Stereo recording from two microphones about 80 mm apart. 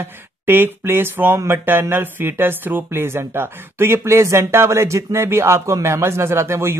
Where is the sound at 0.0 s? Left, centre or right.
Right.